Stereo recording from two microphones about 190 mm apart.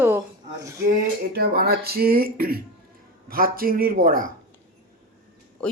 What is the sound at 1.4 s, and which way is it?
Speech, 55° right (ahead or behind).